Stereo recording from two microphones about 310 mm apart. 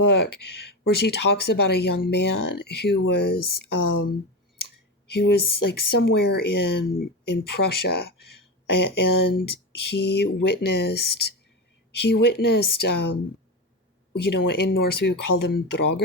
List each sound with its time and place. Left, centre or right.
0.0 s speech: left
7.9 s speech: left
10.8 s speech: left
11.0 s speech: left
11.9 s a sound: left
12.2 s speech: left
14.2 s speech: left